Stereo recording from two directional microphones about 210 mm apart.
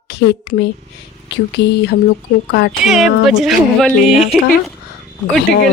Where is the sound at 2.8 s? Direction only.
Centre (ahead or behind).